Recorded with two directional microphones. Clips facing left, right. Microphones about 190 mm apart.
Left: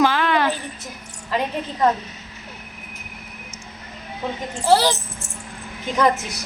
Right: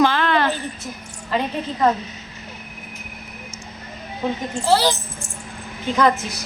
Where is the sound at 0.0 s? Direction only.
10° left (ahead or behind).